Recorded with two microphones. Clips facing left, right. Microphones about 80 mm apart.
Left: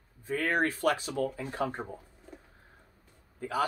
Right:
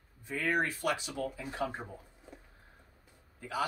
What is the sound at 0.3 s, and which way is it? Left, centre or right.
Speech, left.